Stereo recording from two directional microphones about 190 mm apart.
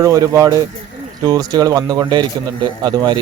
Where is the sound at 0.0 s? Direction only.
15° right (ahead or behind).